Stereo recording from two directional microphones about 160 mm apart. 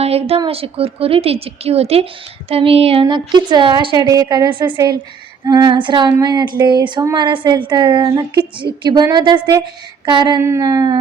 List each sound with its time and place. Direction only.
0.0 s a woman's voice: 40° right (ahead or behind); by 10.9 s 25° right (ahead or behind)